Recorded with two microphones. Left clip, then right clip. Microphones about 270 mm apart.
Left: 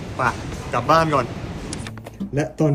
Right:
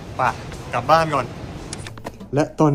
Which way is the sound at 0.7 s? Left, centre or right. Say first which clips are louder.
Even; centre.